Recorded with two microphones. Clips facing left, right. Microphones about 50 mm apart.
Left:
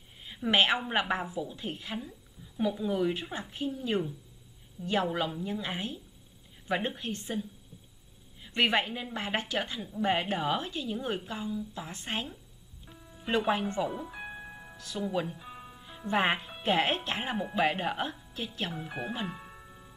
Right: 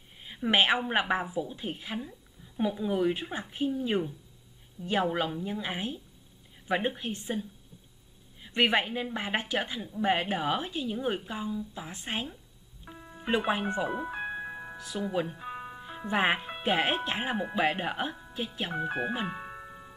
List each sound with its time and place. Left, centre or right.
0.2 s a woman's voice: centre
4.8 s a woman's voice: left
5.1 s a woman's voice: centre
8.5 s a woman's voice: centre
13.0 s music: right
13.5 s speech: centre
14.2 s music: right
16.1 s a woman's voice: centre
18.7 s speech: right
19.2 s music: right